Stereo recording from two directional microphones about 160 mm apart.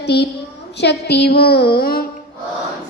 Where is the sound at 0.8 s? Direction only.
90° left; by 2.0 s 70° left (ahead or behind).